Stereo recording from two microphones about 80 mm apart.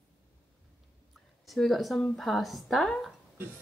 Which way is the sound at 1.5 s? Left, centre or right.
Centre.